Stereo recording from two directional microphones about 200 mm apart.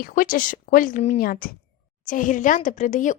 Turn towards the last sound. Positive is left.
turn(degrees=40)  # may be behind; listen again after turning